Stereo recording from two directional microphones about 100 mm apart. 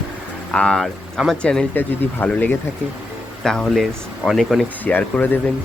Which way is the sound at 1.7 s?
20° left (ahead or behind).